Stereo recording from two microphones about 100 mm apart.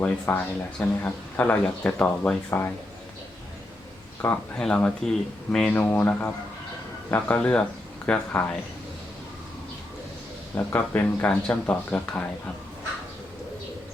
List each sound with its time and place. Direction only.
0.0 s speech: 15° left (ahead or behind)
4.5 s speech: 10° left (ahead or behind)
10.5 s speech: 20° left (ahead or behind)